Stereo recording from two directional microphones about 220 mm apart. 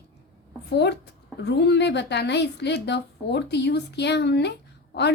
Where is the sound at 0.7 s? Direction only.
50° left (ahead or behind).